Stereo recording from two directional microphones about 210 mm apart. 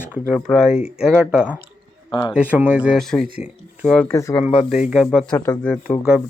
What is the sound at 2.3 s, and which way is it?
Speech, 5° right (ahead or behind).